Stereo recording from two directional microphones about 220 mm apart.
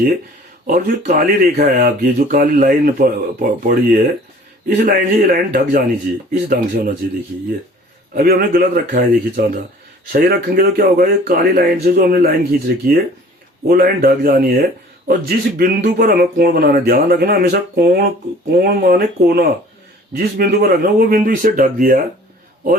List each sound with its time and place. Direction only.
0.7 s speech: 40° right (ahead or behind)
8.1 s speech: 40° right (ahead or behind)